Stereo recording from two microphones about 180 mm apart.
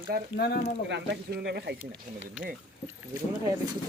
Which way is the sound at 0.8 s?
70° right (ahead or behind).